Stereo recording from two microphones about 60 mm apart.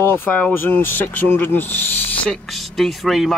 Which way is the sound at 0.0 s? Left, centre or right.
Left.